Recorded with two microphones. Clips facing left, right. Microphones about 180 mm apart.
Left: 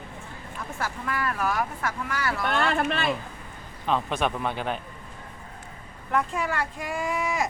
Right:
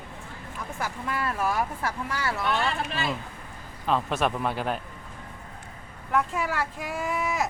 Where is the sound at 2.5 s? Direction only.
55° left (ahead or behind).